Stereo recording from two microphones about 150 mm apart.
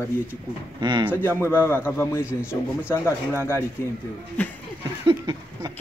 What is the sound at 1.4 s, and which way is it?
A man's voice, 15° left (ahead or behind).